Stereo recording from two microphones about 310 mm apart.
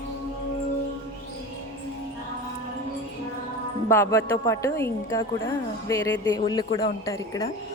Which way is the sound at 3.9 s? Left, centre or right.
Centre.